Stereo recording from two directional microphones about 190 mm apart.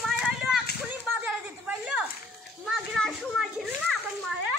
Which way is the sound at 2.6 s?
Centre (ahead or behind).